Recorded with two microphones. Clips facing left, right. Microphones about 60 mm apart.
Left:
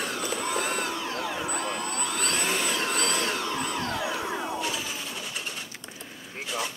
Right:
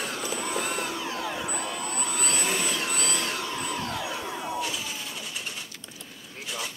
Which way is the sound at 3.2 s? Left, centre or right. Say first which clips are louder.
Left 2 dB; centre.